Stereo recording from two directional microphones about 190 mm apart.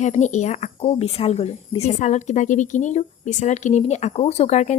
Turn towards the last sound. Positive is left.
turn(degrees=35)  # may be behind; listen again after turning